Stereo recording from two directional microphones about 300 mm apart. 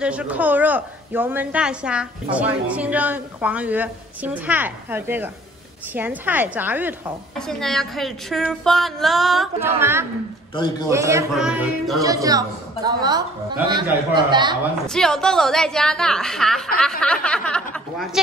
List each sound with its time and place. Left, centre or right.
0.0 s a woman's voice: centre
10.5 s a man's voice: centre
10.9 s a woman's voice: centre
12.0 s a woman's voice: centre
14.9 s a woman's voice: centre